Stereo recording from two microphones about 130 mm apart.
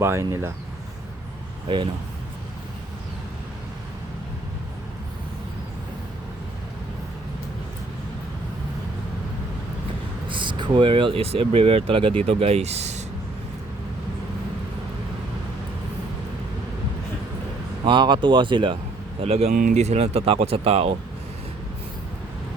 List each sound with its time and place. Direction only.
0.0 s speech: 20° right (ahead or behind)
10.2 s speech: 40° right (ahead or behind); by 13.0 s 55° right (ahead or behind)
17.8 s speech: 40° right (ahead or behind)
19.2 s speech: 55° right (ahead or behind)
19.5 s speech: 75° right (ahead or behind); by 20.9 s 50° right (ahead or behind)